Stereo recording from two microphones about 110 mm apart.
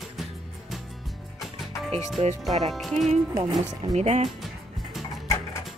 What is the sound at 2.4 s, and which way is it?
Speech, centre (ahead or behind).